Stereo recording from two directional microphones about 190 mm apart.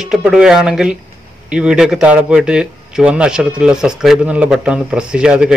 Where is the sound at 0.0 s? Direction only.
5° right (ahead or behind).